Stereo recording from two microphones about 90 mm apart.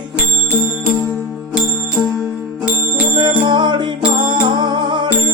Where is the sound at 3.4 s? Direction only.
60° right (ahead or behind).